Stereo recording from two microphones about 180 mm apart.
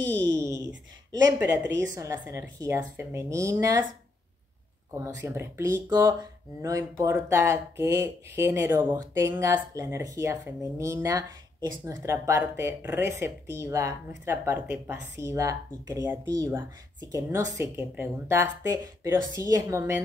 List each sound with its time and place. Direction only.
0.1 s a sound: 5° left (ahead or behind)
1.8 s speech: 15° right (ahead or behind)
4.9 s speech: 15° right (ahead or behind)